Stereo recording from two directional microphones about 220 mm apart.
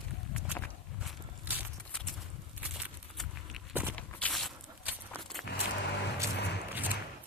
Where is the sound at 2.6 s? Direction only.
5° right (ahead or behind).